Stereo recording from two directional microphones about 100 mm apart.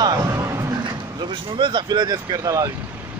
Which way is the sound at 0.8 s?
50° right (ahead or behind).